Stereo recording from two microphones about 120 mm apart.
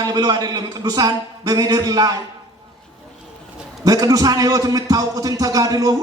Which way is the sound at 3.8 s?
30° right (ahead or behind).